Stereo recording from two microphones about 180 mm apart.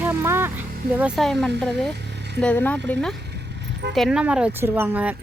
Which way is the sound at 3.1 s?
70° right (ahead or behind).